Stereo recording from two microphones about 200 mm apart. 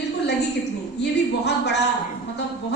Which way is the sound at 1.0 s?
55° left (ahead or behind).